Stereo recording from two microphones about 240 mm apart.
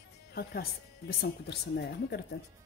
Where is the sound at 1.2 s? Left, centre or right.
Left.